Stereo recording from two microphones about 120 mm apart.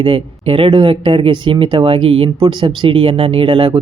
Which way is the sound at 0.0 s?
50° right (ahead or behind).